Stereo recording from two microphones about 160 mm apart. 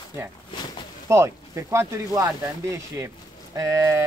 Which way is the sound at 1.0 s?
15° right (ahead or behind).